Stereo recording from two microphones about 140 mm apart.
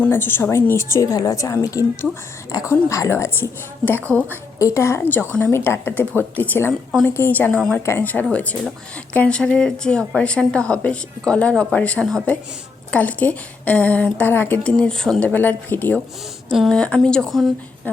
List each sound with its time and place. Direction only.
0.0 s a woman's voice: 15° left (ahead or behind)
17.9 s a woman's voice: 10° left (ahead or behind)